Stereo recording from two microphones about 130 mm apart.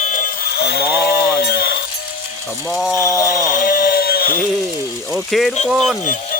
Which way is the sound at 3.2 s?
90° left.